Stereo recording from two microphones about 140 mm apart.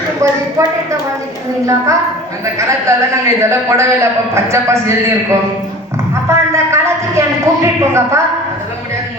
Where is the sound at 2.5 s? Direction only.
20° right (ahead or behind).